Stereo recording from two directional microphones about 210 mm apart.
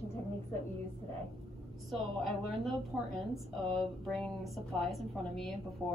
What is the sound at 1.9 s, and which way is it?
A woman's voice, centre (ahead or behind).